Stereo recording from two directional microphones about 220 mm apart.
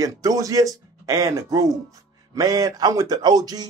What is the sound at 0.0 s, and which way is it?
Speech, 15° right (ahead or behind).